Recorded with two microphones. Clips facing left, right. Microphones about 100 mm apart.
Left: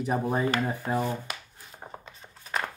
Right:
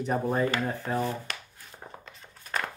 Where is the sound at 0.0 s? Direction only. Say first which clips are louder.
Even; 10° left (ahead or behind).